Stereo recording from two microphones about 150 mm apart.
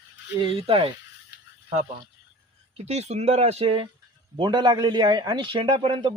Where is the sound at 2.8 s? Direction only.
45° right (ahead or behind).